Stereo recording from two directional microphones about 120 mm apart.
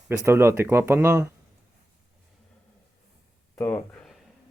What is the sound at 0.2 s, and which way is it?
Speech, 20° right (ahead or behind).